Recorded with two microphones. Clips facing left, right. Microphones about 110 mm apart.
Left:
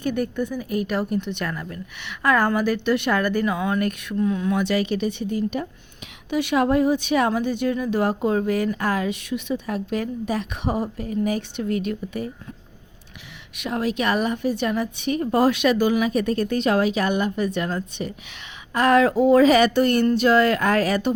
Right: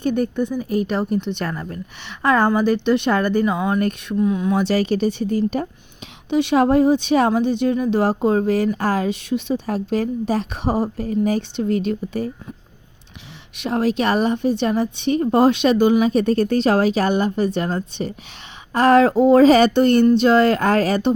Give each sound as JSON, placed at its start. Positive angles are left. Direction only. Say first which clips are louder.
{"t": 0.0, "sound": "speech", "louder": "right 4 dB", "side_deg": -25}
{"t": 4.2, "sound": "speech", "louder": "right 3 dB", "side_deg": -15}
{"t": 4.5, "sound": "speech", "louder": "right 4 dB", "side_deg": -35}
{"t": 6.3, "sound": "speech", "louder": "right 4 dB", "side_deg": -30}
{"t": 13.6, "sound": "speech", "louder": "right 5 dB", "side_deg": -35}